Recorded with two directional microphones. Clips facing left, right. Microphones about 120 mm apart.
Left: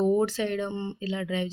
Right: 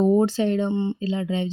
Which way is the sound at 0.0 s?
30° right (ahead or behind).